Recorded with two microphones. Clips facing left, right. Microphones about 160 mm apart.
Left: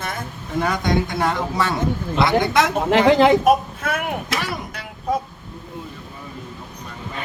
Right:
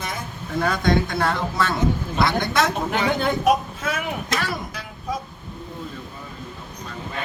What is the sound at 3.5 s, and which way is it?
Speech, 55° left (ahead or behind).